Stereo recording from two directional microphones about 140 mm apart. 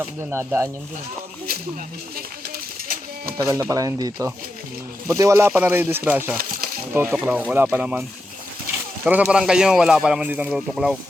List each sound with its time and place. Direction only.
0.2 s speech: 15° right (ahead or behind)
3.3 s speech: 25° right (ahead or behind)
9.0 s speech: 10° right (ahead or behind)